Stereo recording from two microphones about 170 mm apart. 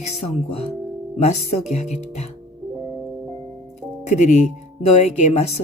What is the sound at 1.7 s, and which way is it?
Speech, 40° left (ahead or behind).